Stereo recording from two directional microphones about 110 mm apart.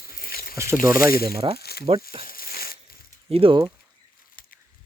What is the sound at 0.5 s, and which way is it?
Speech, 25° right (ahead or behind).